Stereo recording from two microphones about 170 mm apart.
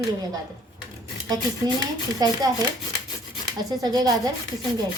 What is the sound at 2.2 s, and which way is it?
Speech, 20° right (ahead or behind).